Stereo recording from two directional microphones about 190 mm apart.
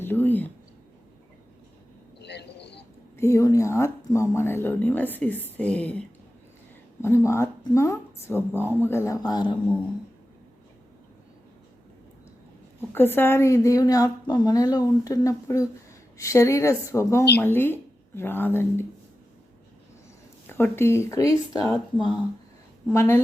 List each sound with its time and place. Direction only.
0.0 s a sound: 10° left (ahead or behind)
2.1 s a sound: 60° left (ahead or behind)
3.2 s speech: 15° left (ahead or behind)
7.3 s speech: 15° left (ahead or behind)
12.9 s speech: 10° left (ahead or behind)
20.5 s speech: 10° left (ahead or behind)